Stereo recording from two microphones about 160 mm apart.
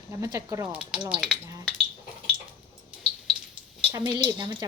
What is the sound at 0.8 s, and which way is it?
Speech, 5° right (ahead or behind).